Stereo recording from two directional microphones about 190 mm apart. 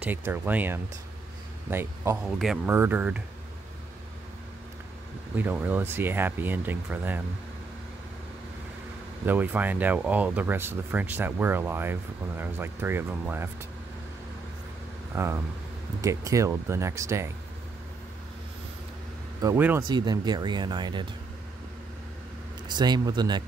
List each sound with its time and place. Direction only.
0.0 s speech: 10° right (ahead or behind)
2.2 s speech: centre (ahead or behind)
5.3 s speech: 10° right (ahead or behind)
9.2 s speech: 10° right (ahead or behind)
15.1 s speech: 15° right (ahead or behind)
19.4 s speech: 10° right (ahead or behind)
19.9 s speech: 20° right (ahead or behind)
22.8 s speech: 20° right (ahead or behind)